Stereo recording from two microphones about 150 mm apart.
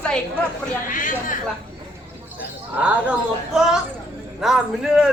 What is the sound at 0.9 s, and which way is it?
Speech, 60° left (ahead or behind).